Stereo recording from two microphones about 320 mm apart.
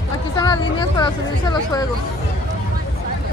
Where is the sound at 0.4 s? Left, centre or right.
Centre.